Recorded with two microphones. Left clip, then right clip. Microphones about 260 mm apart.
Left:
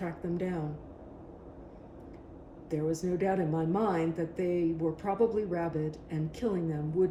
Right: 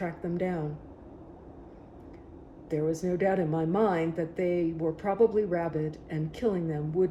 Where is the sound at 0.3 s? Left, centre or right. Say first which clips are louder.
Right 5 dB; right.